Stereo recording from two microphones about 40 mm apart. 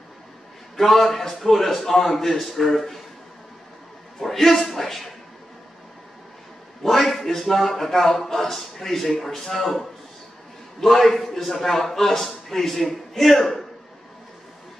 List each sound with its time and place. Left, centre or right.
0.7 s a man's voice: centre
4.2 s speech: centre
6.8 s a man's voice: centre